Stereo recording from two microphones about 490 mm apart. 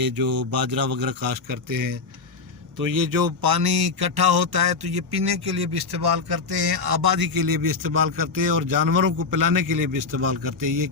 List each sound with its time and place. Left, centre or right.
0.0 s a man's voice: right